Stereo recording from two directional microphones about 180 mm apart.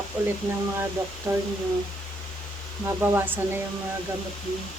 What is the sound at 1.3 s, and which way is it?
Speech, 20° right (ahead or behind).